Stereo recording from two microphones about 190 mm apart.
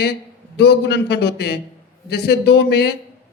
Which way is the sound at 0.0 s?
60° left (ahead or behind).